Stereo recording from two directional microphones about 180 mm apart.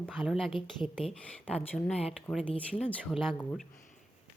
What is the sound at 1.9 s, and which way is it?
Speech, 35° left (ahead or behind).